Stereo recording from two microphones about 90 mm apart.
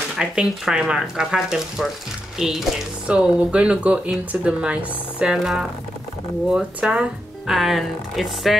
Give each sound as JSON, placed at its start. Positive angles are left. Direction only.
{"t": 0.2, "sound": "speech", "side_deg": -10}